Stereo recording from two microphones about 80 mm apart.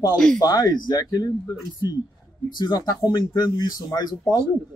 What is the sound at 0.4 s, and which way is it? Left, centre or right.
Speech, left.